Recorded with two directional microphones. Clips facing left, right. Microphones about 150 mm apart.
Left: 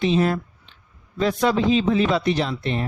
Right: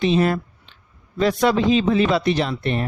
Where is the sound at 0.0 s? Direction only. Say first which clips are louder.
Right 2 dB; 65° right (ahead or behind).